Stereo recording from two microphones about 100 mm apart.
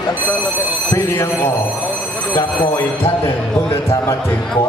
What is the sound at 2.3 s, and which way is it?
Speech, 50° left (ahead or behind).